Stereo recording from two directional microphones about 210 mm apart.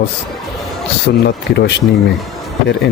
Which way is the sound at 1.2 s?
55° left (ahead or behind).